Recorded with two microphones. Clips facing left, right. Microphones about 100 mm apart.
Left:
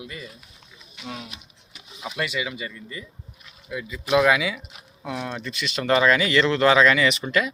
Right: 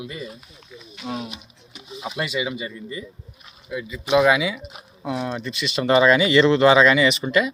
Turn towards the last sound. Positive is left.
turn(degrees=-10)  # may be behind; listen again after turning